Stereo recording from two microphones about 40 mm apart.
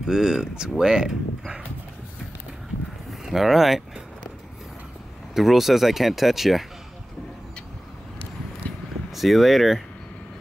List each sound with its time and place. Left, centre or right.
0.0 s speech: centre
3.1 s speech: centre
5.3 s speech: centre
8.6 s vehicle: left
9.1 s speech: centre